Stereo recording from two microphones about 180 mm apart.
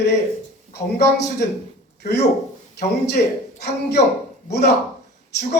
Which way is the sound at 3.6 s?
65° left (ahead or behind).